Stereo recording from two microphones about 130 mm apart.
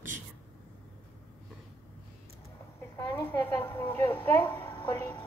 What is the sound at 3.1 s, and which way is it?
A woman's voice, 15° left (ahead or behind).